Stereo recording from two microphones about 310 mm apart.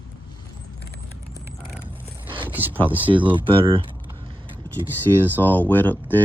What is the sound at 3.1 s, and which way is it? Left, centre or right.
Speech, centre.